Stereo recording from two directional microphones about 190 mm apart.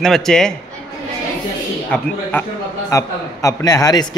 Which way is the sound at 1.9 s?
10° left (ahead or behind).